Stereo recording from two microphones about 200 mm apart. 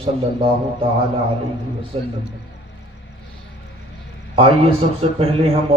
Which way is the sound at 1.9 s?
30° right (ahead or behind).